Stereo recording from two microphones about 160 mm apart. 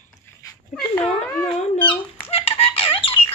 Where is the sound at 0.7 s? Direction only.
5° left (ahead or behind).